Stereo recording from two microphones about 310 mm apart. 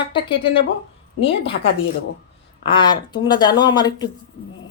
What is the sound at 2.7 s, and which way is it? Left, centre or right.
Speech, centre.